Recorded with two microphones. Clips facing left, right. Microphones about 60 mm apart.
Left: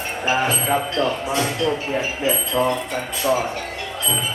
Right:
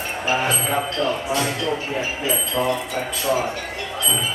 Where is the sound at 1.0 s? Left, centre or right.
Centre.